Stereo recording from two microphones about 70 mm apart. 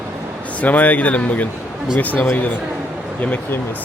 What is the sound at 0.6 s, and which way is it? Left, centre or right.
Speech, left.